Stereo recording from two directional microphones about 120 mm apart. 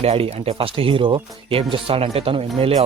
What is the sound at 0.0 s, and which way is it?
Speech, 55° right (ahead or behind).